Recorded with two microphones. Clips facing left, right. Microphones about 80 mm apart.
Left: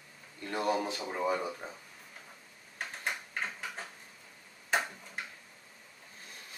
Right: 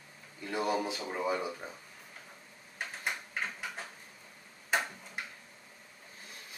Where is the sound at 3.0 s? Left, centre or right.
Centre.